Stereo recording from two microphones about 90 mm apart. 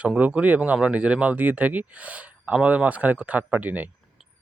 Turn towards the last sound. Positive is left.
turn(degrees=-20)  # may be behind; listen again after turning